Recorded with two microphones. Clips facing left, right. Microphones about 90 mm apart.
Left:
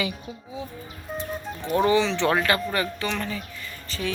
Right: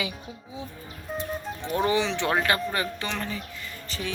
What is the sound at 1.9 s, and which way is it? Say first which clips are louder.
Speech: left 3 dB; 15° right (ahead or behind).